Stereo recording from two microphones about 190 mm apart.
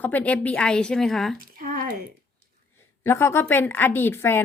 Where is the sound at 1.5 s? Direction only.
50° right (ahead or behind).